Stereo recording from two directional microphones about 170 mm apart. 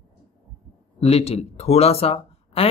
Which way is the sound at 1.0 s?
35° left (ahead or behind).